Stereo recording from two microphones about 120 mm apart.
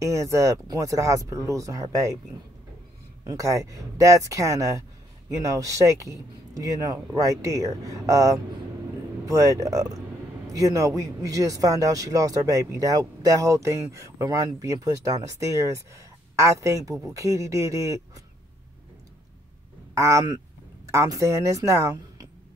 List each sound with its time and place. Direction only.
0.0 s a man's voice: 25° right (ahead or behind)
3.3 s a man's voice: 30° right (ahead or behind)
19.9 s speech: 25° right (ahead or behind)